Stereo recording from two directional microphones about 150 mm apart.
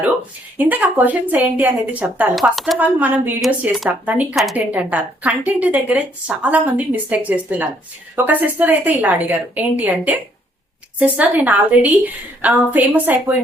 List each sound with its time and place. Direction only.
0.6 s a woman's voice: 10° right (ahead or behind)
2.7 s a woman's voice: 10° right (ahead or behind)